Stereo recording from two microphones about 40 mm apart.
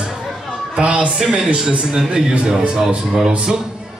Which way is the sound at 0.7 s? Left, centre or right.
Right.